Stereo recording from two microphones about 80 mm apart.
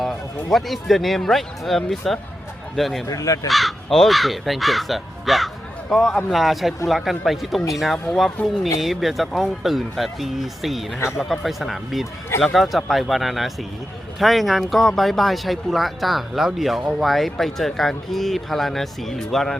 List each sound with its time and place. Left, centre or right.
0.5 s speech: centre
3.1 s speech: left
3.5 s speech: centre